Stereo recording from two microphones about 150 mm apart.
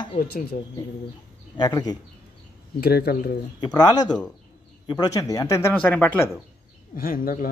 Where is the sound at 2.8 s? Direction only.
90° left.